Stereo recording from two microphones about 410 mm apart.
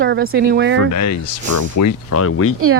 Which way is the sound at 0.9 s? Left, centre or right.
Left.